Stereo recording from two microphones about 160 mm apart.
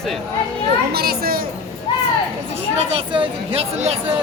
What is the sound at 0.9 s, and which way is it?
Speech, 75° right (ahead or behind).